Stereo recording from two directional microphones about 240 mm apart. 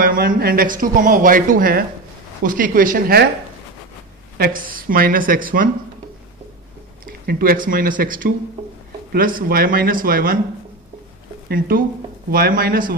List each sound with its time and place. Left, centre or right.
0.0 s speech: right
4.4 s speech: right
7.1 s speech: right
11.4 s speech: right